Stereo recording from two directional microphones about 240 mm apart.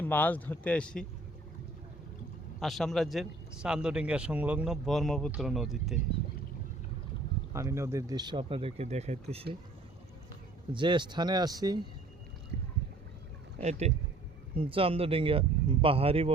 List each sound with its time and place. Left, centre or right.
0.0 s speech: centre
2.6 s speech: centre
7.5 s speech: centre
10.7 s speech: centre
13.6 s speech: right